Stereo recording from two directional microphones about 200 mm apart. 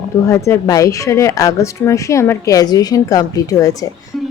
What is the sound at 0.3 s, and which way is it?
A woman's voice, 15° left (ahead or behind).